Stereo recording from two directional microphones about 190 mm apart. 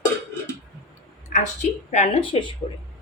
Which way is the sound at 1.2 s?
40° left (ahead or behind).